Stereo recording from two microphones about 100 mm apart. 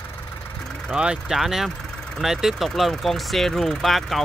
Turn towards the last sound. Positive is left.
turn(degrees=0)  # may be behind; listen again after turning